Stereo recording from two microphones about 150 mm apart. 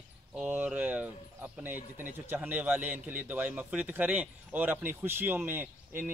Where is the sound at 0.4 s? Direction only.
10° right (ahead or behind).